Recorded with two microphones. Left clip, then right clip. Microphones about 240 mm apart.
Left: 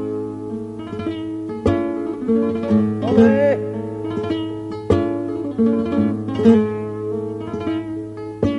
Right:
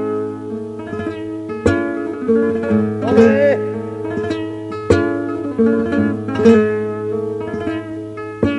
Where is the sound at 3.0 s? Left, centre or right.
Centre.